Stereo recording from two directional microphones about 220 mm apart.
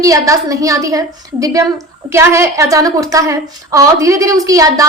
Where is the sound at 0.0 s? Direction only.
15° right (ahead or behind).